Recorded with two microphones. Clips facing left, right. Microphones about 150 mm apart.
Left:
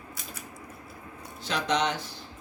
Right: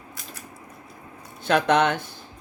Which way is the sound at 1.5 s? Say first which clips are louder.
Right 8 dB; 55° right (ahead or behind).